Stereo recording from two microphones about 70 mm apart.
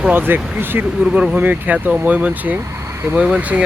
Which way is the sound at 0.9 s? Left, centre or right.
Centre.